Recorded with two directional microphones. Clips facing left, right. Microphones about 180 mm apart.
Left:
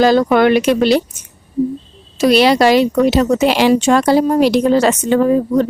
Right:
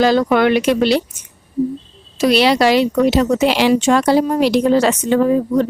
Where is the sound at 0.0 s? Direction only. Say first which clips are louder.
Left 2 dB; 45° left (ahead or behind).